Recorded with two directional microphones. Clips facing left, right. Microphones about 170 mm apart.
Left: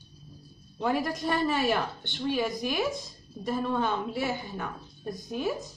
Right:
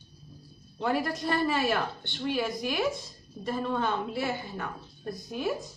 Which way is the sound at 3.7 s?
15° left (ahead or behind).